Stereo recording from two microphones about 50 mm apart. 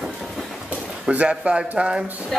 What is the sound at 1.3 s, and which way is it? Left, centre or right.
Speech, centre.